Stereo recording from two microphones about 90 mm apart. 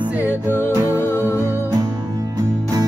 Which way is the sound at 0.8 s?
30° left (ahead or behind).